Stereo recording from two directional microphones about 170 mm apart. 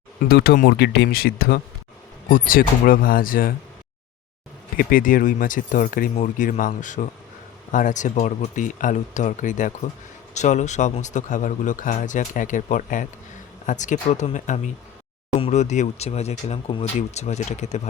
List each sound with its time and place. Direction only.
0.2 s speech: 65° left (ahead or behind)
4.8 s speech: 55° left (ahead or behind)